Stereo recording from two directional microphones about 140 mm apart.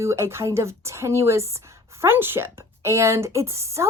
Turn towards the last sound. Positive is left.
turn(degrees=-20)  # may be behind; listen again after turning